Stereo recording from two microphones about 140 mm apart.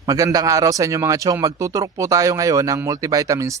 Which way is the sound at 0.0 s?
25° right (ahead or behind).